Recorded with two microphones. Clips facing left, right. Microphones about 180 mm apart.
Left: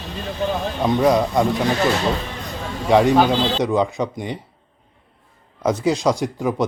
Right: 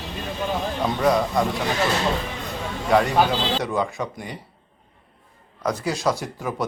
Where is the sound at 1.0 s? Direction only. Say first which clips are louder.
Left 2 dB; 20° left (ahead or behind).